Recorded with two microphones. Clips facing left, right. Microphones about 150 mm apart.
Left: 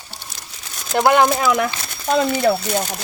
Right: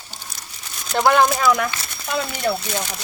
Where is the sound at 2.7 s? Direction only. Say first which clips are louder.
Left 5 dB; 35° left (ahead or behind).